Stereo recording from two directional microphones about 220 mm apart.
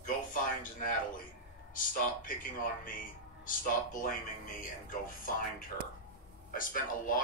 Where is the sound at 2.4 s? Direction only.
40° left (ahead or behind).